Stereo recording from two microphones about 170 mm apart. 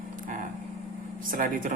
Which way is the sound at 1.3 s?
55° right (ahead or behind).